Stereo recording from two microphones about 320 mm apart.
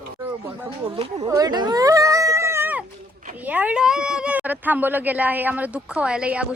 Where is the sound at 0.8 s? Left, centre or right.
Centre.